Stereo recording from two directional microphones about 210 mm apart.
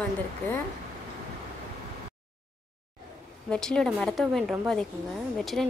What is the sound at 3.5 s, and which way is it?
Speech, 5° left (ahead or behind).